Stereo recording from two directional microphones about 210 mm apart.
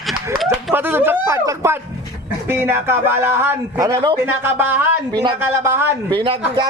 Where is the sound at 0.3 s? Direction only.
10° right (ahead or behind).